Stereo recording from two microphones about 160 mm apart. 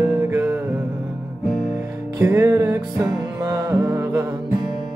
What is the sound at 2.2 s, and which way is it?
Music, 15° right (ahead or behind).